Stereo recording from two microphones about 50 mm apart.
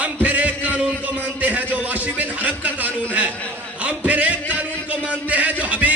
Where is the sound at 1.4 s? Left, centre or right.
Right.